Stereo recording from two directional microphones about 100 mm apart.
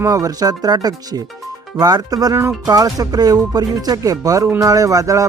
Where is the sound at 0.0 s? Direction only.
35° right (ahead or behind).